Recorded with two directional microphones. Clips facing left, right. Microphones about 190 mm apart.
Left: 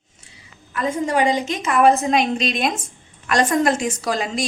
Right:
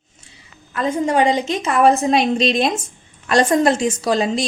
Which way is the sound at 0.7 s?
25° right (ahead or behind).